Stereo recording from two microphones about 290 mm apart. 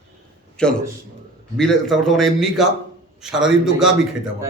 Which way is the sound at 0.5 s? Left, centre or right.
Centre.